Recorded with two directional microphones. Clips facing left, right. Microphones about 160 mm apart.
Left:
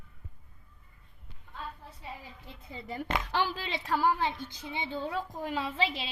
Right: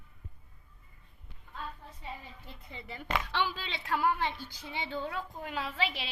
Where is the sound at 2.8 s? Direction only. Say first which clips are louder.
Left 2 dB; 45° left (ahead or behind).